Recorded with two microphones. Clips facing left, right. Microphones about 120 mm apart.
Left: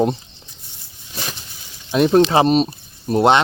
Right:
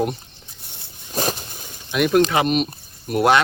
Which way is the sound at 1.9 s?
30° left (ahead or behind).